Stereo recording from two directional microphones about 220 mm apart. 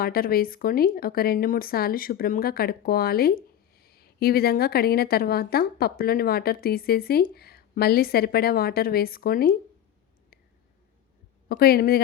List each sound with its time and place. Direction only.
0.0 s speech: 40° left (ahead or behind)
11.4 s speech: 45° left (ahead or behind)